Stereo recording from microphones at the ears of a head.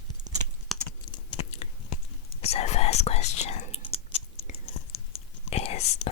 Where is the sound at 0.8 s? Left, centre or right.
Left.